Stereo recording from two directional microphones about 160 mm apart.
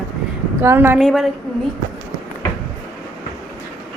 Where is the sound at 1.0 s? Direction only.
Centre (ahead or behind).